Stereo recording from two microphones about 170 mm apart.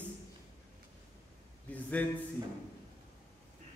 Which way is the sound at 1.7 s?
10° left (ahead or behind).